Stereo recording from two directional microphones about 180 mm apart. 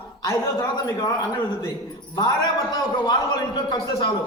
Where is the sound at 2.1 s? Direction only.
25° left (ahead or behind).